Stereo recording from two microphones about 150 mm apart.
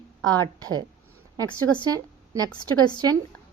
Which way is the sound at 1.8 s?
25° right (ahead or behind).